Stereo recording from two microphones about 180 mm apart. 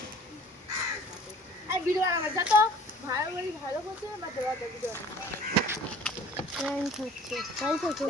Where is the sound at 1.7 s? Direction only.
15° right (ahead or behind).